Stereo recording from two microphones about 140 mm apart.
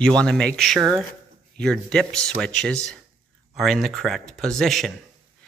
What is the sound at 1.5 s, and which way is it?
Speech, 5° left (ahead or behind).